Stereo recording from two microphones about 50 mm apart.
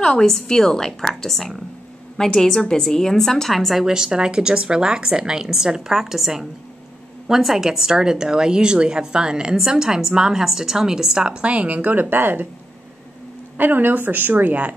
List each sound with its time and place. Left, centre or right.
0.0 s a woman's voice: centre
3.8 s a woman's voice: centre; by 12.4 s right
13.6 s a woman's voice: right